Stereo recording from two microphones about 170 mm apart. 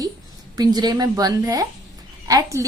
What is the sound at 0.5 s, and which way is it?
A woman's voice, 25° right (ahead or behind).